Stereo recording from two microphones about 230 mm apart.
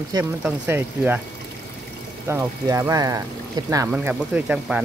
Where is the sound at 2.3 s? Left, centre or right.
Centre.